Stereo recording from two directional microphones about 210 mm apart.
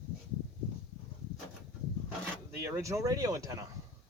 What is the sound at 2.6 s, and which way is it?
Speech, 10° right (ahead or behind).